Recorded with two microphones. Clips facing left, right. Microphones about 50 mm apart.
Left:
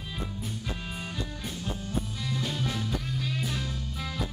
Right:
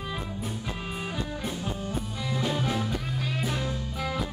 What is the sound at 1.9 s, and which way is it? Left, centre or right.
Music, centre.